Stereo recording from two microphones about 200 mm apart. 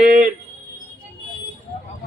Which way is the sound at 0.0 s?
45° right (ahead or behind).